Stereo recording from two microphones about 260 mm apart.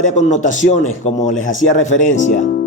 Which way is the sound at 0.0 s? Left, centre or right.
Left.